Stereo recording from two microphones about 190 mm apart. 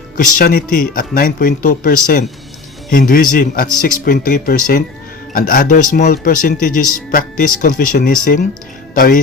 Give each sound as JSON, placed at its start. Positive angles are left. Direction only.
{"t": 0.3, "sound": "speech", "side_deg": 50}